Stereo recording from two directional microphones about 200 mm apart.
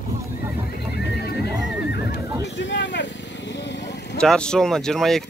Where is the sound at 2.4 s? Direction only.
65° left (ahead or behind).